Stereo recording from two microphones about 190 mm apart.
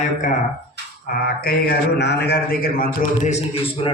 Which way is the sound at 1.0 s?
50° left (ahead or behind).